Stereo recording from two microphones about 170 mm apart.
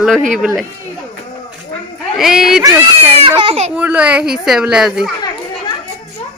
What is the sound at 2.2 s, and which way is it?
Speech, centre (ahead or behind).